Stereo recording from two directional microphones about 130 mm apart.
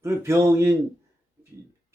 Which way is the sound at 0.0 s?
20° right (ahead or behind).